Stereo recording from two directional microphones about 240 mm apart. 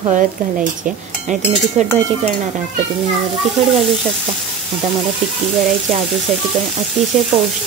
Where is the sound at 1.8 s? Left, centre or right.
Right.